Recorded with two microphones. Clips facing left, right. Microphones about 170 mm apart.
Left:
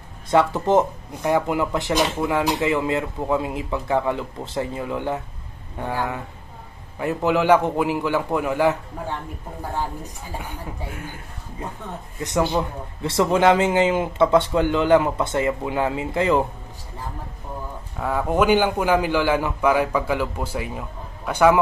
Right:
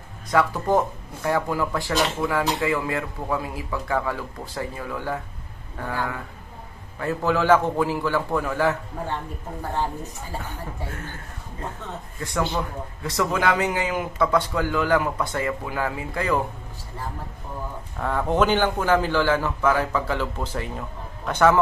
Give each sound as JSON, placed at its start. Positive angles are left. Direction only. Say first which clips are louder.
{"t": 0.3, "sound": "a man's voice", "louder": "left 3 dB", "side_deg": 25}
{"t": 10.4, "sound": "a man's voice", "louder": "left 1 dB", "side_deg": 10}
{"t": 12.2, "sound": "speech", "louder": "left 4 dB", "side_deg": 20}
{"t": 17.9, "sound": "a man's voice", "louder": "left 1 dB", "side_deg": 5}